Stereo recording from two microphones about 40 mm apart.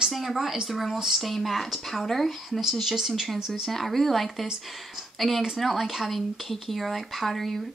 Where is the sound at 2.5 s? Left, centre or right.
Centre.